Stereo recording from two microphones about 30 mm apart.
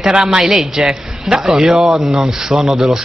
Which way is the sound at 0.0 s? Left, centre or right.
Right.